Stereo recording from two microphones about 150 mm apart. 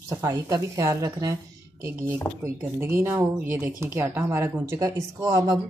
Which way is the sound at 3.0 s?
15° right (ahead or behind).